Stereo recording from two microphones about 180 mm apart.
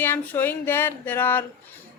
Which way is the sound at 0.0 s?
10° left (ahead or behind).